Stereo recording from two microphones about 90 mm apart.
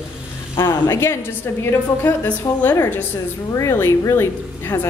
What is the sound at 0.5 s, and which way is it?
A woman's voice, 30° left (ahead or behind).